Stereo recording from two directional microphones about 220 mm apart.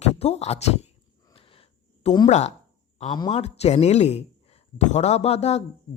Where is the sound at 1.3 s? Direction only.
25° left (ahead or behind).